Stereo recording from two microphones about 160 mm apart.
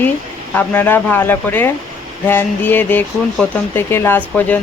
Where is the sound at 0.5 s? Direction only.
10° left (ahead or behind).